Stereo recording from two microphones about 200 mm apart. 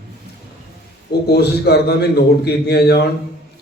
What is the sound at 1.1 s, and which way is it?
A man's voice, 55° left (ahead or behind).